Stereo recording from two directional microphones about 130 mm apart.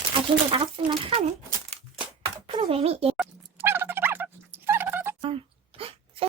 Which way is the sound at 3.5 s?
15° right (ahead or behind).